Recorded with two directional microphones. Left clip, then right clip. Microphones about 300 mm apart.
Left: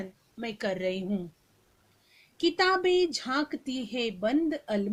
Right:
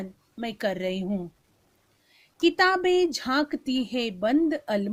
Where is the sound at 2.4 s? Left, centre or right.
Right.